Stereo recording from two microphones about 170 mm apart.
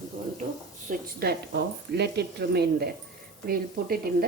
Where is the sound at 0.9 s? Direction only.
70° right (ahead or behind).